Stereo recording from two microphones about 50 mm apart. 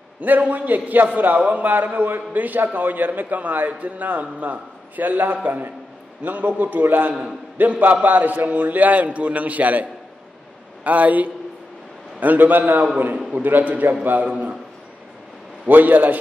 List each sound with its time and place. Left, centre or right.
0.2 s a man's voice: right
15.7 s a man's voice: right